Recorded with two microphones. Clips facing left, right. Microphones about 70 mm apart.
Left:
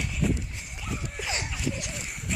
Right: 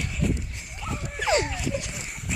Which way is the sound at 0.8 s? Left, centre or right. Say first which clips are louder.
Right 7 dB; centre.